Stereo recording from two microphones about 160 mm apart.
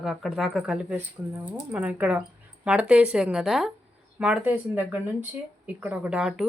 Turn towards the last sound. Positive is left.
turn(degrees=-5)  # may be behind; listen again after turning